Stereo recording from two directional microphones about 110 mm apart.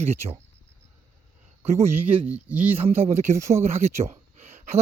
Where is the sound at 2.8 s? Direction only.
65° right (ahead or behind).